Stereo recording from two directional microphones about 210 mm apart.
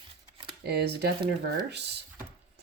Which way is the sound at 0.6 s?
50° right (ahead or behind).